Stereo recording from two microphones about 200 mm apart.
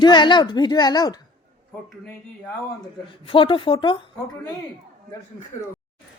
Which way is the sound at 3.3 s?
25° left (ahead or behind).